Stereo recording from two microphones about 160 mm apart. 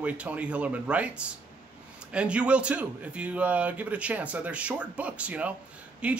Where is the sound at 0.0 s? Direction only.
10° right (ahead or behind).